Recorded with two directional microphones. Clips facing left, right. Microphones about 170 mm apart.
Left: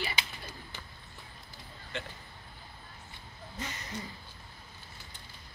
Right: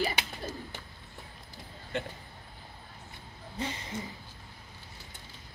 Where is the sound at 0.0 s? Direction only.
40° right (ahead or behind).